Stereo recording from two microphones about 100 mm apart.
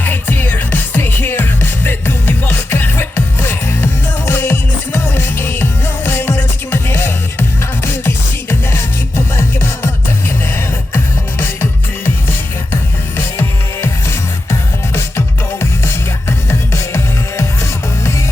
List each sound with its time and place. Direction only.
0.0 s music: 20° left (ahead or behind)
12.7 s music: 25° left (ahead or behind)
15.6 s music: 25° left (ahead or behind)